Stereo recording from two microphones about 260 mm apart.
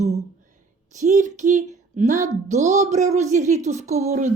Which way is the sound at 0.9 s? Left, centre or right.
Right.